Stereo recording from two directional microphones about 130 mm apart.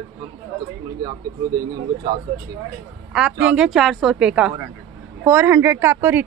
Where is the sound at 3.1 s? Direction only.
5° right (ahead or behind).